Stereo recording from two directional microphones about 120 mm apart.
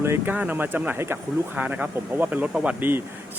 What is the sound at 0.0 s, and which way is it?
Speech, 15° right (ahead or behind).